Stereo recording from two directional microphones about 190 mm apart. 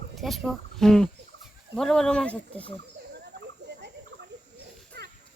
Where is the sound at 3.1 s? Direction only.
60° right (ahead or behind).